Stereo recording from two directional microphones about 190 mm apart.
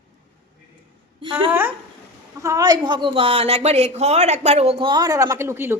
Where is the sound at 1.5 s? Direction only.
10° right (ahead or behind).